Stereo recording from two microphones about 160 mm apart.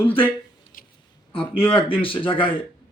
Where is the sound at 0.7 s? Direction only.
60° left (ahead or behind).